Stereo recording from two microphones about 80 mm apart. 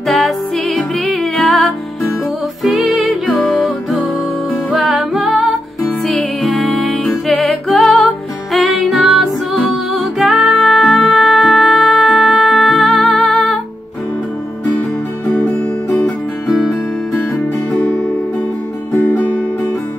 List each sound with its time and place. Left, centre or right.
0.1 s music: centre
15.3 s music: centre
18.9 s music: left